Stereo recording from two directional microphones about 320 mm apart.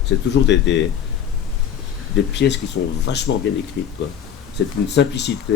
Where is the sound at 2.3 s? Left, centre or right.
Left.